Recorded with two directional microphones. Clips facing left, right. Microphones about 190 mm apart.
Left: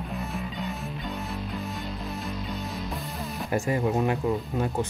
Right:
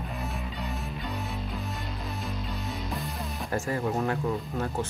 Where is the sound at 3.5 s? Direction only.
15° left (ahead or behind).